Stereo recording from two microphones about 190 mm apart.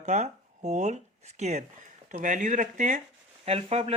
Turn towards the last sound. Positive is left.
turn(degrees=-35)  # may be behind; listen again after turning